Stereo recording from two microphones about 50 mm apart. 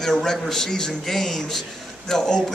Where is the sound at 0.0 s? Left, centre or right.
Centre.